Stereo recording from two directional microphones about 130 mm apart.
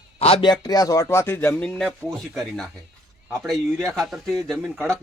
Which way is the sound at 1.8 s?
Centre (ahead or behind).